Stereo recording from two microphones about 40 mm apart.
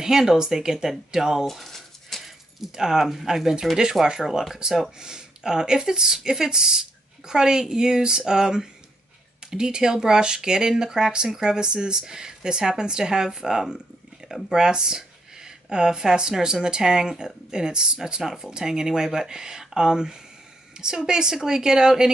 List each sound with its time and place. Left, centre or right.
0.0 s speech: centre
1.5 s a sound: centre
2.2 s speech: centre